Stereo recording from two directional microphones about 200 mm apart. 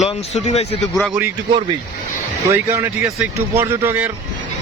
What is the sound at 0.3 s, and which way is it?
Speech, 35° left (ahead or behind).